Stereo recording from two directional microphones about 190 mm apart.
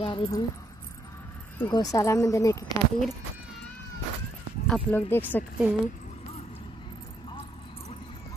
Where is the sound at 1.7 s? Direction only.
20° left (ahead or behind).